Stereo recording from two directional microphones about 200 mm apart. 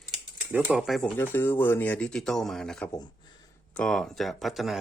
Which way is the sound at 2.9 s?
20° left (ahead or behind).